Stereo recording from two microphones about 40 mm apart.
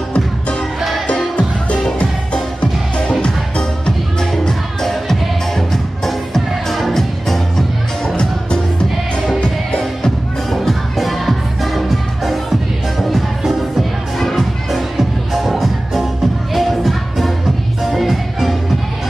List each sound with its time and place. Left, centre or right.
0.1 s music: left
0.7 s music: centre
1.0 s music: left
4.2 s music: centre
9.4 s music: left
10.5 s music: centre